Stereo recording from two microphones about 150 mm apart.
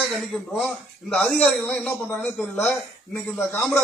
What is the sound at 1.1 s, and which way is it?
Speech, 5° left (ahead or behind).